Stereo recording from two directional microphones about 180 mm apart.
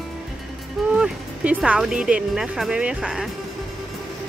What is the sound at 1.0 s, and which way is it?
Speech, 5° right (ahead or behind).